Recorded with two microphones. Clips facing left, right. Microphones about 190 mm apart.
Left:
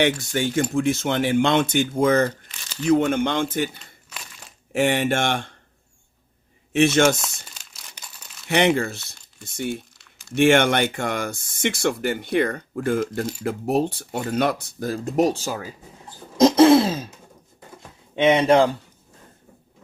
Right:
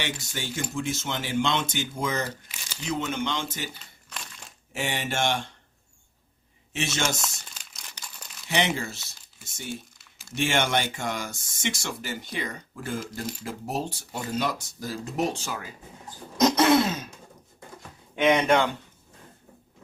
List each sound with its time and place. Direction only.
0.0 s speech: 55° left (ahead or behind)
4.1 s crumpling: 5° left (ahead or behind)
4.7 s speech: 55° left (ahead or behind)
6.7 s speech: 55° left (ahead or behind)
7.2 s crumpling: centre (ahead or behind)
8.4 s speech: 55° left (ahead or behind)
10.0 s a sound: centre (ahead or behind)
10.3 s speech: 60° left (ahead or behind); by 15.6 s 35° left (ahead or behind)
16.4 s throat clearing: 30° left (ahead or behind)
18.2 s speech: 30° left (ahead or behind)